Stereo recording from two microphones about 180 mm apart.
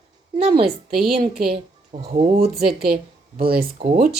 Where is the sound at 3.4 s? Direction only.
55° right (ahead or behind).